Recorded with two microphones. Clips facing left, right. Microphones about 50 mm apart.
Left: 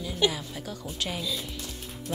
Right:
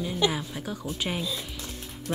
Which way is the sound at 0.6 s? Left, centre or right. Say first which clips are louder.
Right 2 dB; centre.